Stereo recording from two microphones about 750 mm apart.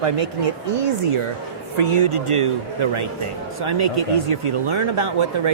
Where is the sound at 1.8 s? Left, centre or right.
Right.